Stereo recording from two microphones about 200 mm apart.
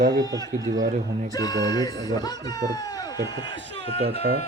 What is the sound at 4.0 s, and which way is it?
Speech, 55° right (ahead or behind).